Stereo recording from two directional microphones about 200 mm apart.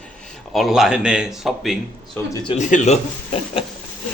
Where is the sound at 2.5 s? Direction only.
35° left (ahead or behind).